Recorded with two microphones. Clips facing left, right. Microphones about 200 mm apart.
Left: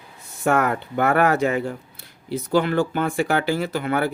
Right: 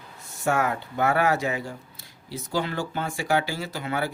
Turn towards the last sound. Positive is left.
turn(degrees=55)  # may be behind; listen again after turning